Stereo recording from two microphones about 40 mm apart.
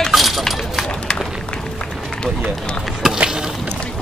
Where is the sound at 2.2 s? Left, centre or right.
Left.